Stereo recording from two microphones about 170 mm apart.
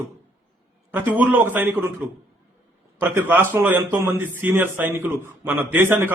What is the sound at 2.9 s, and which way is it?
Speech, 15° right (ahead or behind).